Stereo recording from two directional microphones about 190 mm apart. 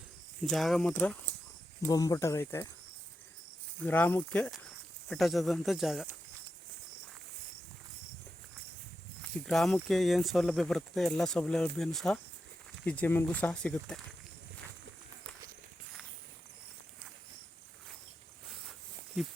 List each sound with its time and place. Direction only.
0.5 s speech: centre (ahead or behind)
3.8 s speech: 10° left (ahead or behind)
9.5 s speech: centre (ahead or behind)
19.2 s speech: 5° right (ahead or behind)